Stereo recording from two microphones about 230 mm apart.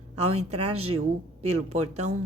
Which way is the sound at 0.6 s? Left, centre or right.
Right.